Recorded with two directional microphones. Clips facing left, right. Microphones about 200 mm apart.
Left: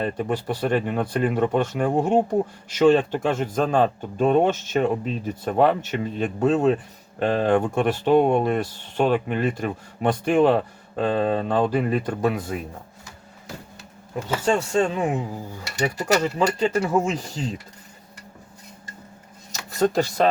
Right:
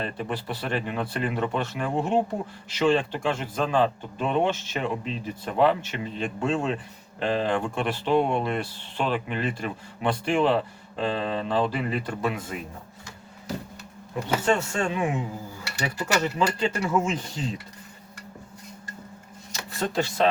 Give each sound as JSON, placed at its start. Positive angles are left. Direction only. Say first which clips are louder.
{"t": 0.0, "sound": "speech", "louder": "left 6 dB", "side_deg": 45}
{"t": 14.7, "sound": "speech", "louder": "left 5 dB", "side_deg": 40}
{"t": 16.2, "sound": "speech", "louder": "left 3 dB", "side_deg": 30}
{"t": 19.5, "sound": "a sound", "louder": "left 8 dB", "side_deg": 45}